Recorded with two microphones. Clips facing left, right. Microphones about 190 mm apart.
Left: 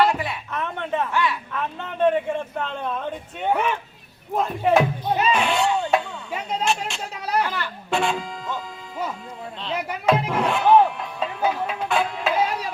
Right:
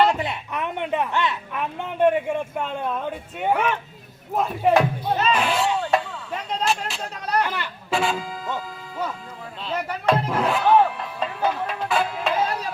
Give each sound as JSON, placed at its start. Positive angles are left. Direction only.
{"t": 0.0, "sound": "a woman's voice", "side_deg": -20}
{"t": 5.0, "sound": "speech", "side_deg": 10}
{"t": 5.3, "sound": "speech", "side_deg": 0}
{"t": 7.4, "sound": "a woman's voice", "side_deg": -15}
{"t": 7.9, "sound": "speech", "side_deg": 0}
{"t": 9.9, "sound": "speech", "side_deg": 5}